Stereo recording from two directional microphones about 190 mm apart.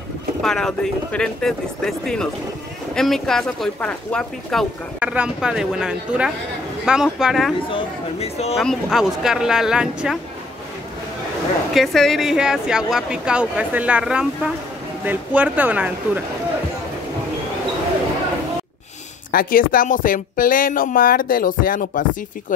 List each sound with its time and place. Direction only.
0.4 s speech: 5° left (ahead or behind)
7.7 s speech: 35° left (ahead or behind)
8.5 s speech: centre (ahead or behind)
11.7 s speech: centre (ahead or behind)
19.3 s speech: 45° left (ahead or behind)